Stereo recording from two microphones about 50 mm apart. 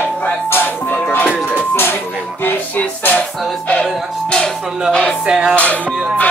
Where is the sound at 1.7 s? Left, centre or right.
Left.